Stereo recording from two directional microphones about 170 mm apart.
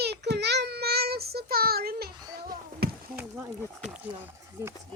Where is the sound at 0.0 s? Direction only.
75° right (ahead or behind).